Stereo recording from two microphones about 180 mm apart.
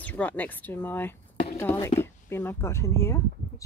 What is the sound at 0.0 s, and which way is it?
Speech, 10° left (ahead or behind).